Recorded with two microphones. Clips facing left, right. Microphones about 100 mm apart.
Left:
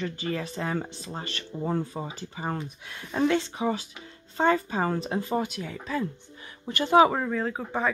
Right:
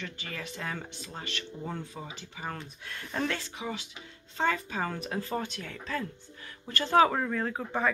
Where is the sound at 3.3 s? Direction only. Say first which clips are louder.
Left 10 dB; 35° left (ahead or behind).